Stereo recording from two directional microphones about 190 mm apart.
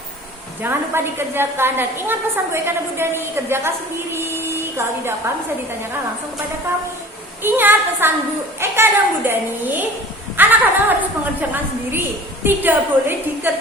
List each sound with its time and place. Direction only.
0.6 s a woman's voice: 10° right (ahead or behind)
7.4 s a woman's voice: 10° right (ahead or behind)